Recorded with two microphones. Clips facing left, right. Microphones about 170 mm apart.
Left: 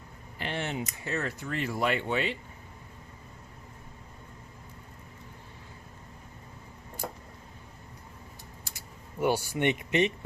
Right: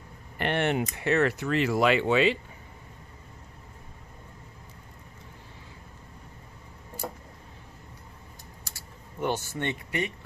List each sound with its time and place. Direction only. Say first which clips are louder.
0.3 s speech: right 7 dB; 65° right (ahead or behind); by 2.4 s 90° right
9.2 s speech: left 3 dB; 10° left (ahead or behind)